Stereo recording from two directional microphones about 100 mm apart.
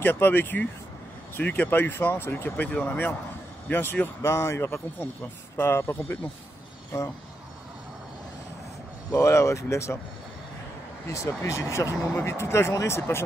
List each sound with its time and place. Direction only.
0.0 s speech: 20° left (ahead or behind)
9.1 s speech: 30° left (ahead or behind)
11.1 s speech: 30° left (ahead or behind)